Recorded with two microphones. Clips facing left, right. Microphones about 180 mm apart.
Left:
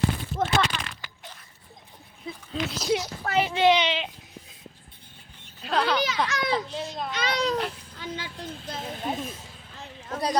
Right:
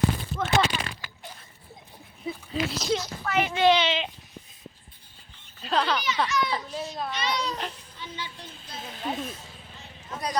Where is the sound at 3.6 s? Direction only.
15° left (ahead or behind).